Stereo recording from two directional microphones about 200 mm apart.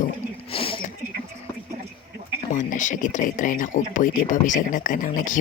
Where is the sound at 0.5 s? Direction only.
25° left (ahead or behind).